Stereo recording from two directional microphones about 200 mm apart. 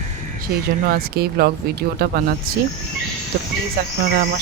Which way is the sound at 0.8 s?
50° right (ahead or behind).